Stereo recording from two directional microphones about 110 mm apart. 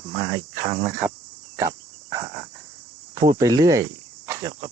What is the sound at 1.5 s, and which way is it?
Cricket, 30° right (ahead or behind).